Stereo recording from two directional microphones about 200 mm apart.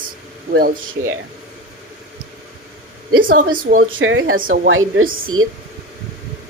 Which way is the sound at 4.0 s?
75° right (ahead or behind).